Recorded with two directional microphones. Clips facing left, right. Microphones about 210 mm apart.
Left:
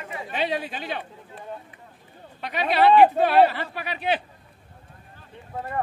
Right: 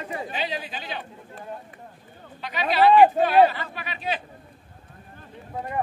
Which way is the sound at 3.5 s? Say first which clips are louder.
Left 3 dB; 65° left (ahead or behind).